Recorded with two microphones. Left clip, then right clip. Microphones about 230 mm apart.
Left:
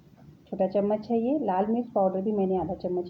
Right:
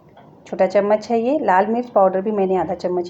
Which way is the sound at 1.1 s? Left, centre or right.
Right.